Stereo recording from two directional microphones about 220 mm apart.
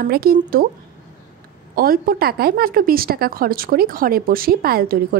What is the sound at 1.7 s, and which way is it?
A woman's voice, 40° right (ahead or behind).